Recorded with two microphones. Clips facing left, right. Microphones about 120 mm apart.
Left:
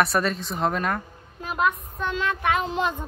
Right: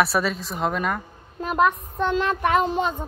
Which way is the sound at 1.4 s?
50° right (ahead or behind).